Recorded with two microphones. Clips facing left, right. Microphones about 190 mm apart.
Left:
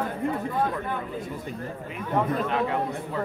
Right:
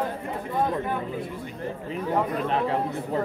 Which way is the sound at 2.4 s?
30° right (ahead or behind).